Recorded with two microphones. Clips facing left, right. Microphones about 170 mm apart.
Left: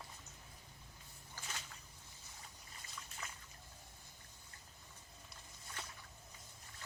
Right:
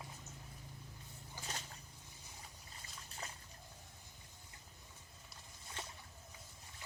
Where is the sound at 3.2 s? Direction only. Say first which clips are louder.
Right 3 dB; 35° right (ahead or behind).